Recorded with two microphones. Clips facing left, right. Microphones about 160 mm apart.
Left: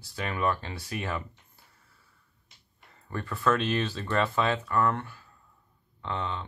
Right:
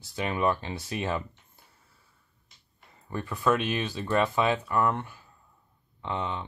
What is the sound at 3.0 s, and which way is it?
Speech, 15° right (ahead or behind).